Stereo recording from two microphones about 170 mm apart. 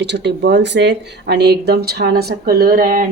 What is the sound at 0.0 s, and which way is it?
A woman's voice, 90° right.